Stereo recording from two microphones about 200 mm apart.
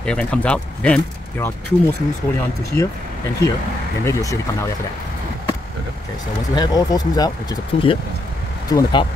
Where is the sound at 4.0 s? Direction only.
15° left (ahead or behind).